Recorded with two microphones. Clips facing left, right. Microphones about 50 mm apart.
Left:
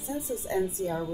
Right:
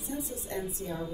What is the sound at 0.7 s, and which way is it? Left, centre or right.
Speech, left.